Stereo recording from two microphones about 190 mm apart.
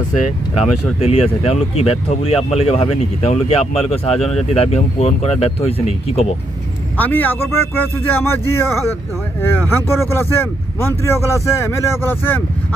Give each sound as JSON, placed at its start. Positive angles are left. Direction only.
{"t": 0.9, "sound": "speech", "side_deg": 30}
{"t": 7.0, "sound": "speech", "side_deg": 10}